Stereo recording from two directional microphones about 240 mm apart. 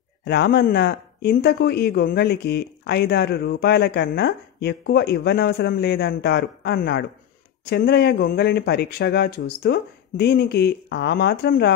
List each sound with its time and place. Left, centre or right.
0.2 s speech: left